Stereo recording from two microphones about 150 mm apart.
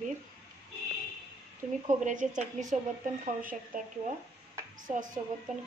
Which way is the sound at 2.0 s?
55° right (ahead or behind).